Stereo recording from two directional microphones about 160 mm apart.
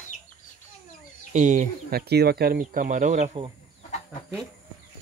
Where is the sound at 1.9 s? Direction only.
85° right; by 3.4 s 50° right (ahead or behind).